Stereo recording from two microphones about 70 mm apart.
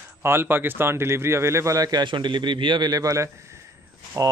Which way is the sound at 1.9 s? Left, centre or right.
Right.